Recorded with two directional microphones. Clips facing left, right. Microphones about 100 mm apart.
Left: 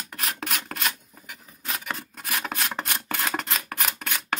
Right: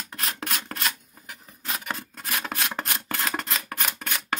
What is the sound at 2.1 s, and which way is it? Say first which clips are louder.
Rub: left 1 dB; 5° left (ahead or behind).